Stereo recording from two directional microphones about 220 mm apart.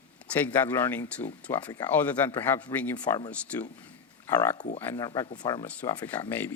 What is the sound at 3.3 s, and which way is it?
A man's voice, 5° left (ahead or behind).